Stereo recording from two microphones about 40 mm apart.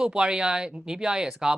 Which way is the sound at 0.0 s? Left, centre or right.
Right.